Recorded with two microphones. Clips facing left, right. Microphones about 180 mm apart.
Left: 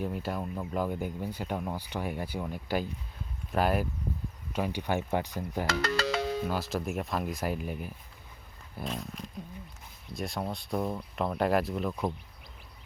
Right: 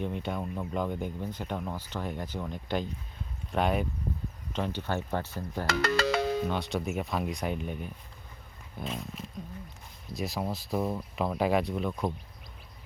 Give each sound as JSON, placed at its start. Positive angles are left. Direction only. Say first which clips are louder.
{"t": 0.0, "sound": "speech", "louder": "even", "side_deg": 5}
{"t": 5.8, "sound": "music", "louder": "right 6 dB", "side_deg": -55}
{"t": 6.5, "sound": "speech", "louder": "right 1 dB", "side_deg": 0}